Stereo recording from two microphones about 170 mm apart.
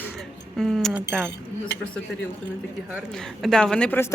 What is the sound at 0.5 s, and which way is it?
Speech, centre (ahead or behind).